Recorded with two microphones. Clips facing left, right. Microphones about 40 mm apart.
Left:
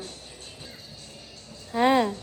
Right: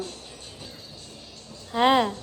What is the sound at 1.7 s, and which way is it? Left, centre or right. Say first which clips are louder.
Speech: right 1 dB; right.